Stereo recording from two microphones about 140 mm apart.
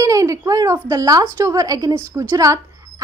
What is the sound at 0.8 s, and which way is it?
A woman's voice, 25° right (ahead or behind).